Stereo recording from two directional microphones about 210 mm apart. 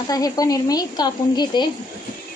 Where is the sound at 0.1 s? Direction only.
15° left (ahead or behind).